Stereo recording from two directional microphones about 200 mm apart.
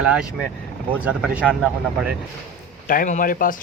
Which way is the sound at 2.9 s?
40° left (ahead or behind).